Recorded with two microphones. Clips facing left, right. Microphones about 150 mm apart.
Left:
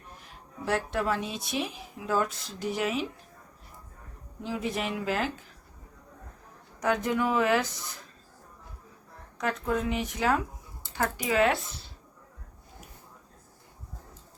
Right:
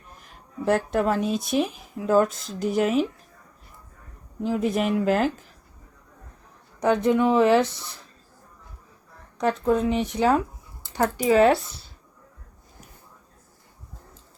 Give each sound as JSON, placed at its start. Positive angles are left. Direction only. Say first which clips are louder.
{"t": 0.9, "sound": "speech", "louder": "right 7 dB", "side_deg": -45}
{"t": 4.4, "sound": "speech", "louder": "right 8 dB", "side_deg": -50}
{"t": 6.7, "sound": "speech", "louder": "right 7 dB", "side_deg": -25}
{"t": 9.4, "sound": "speech", "louder": "right 7 dB", "side_deg": -30}